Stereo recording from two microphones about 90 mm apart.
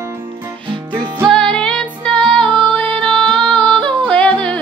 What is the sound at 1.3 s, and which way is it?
Music, 10° left (ahead or behind).